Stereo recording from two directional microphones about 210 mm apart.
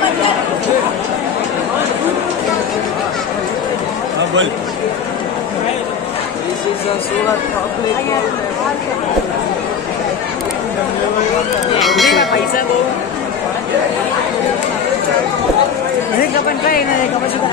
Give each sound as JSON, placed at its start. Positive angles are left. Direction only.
{"t": 11.8, "sound": "bell", "side_deg": 0}
{"t": 16.2, "sound": "chatter", "side_deg": 45}